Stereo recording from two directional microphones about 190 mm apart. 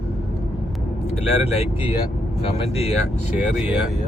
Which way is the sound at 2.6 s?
30° left (ahead or behind).